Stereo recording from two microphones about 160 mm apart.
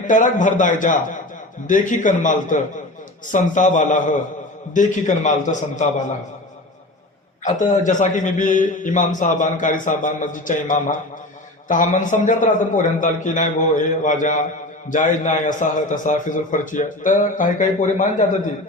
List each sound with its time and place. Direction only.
0.1 s a man's voice: 50° left (ahead or behind)
7.4 s a man's voice: 50° left (ahead or behind)